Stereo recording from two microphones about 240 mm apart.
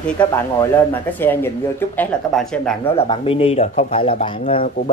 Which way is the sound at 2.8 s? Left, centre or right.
Left.